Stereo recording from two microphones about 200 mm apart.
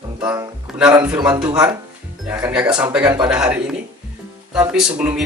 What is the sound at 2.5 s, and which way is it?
Speech, 5° right (ahead or behind).